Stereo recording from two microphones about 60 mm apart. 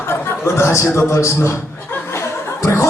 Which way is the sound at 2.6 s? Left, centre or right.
Left.